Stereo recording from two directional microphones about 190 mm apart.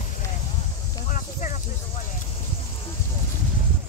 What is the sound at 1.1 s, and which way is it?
Snake, 40° left (ahead or behind).